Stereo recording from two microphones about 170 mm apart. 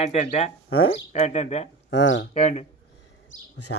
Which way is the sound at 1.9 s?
90° left.